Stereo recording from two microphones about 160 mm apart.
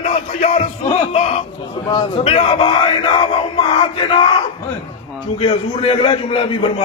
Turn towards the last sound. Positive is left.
turn(degrees=35)  # may be behind; listen again after turning